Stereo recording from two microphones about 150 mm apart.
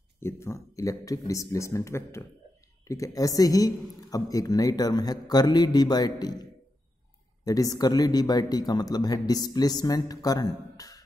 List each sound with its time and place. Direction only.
0.2 s speech: 20° left (ahead or behind)
7.4 s speech: 25° left (ahead or behind)